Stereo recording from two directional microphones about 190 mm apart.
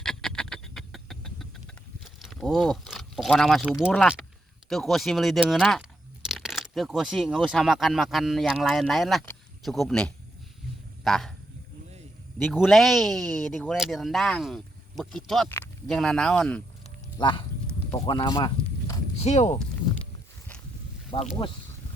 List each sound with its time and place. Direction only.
0.0 s a sound: 5° left (ahead or behind)
2.1 s speech: centre (ahead or behind)
12.4 s speech: centre (ahead or behind)
15.4 s a sound: 10° left (ahead or behind)
16.0 s speech: 5° left (ahead or behind)
17.2 s speech: 25° left (ahead or behind)
18.0 s a sound: 25° left (ahead or behind)
19.3 s speech: 35° left (ahead or behind)
21.1 s speech: 30° left (ahead or behind)